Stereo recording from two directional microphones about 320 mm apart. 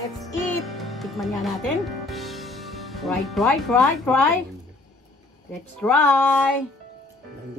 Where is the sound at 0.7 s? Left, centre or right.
Centre.